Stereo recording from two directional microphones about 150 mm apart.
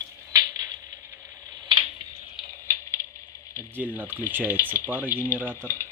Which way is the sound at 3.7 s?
10° right (ahead or behind).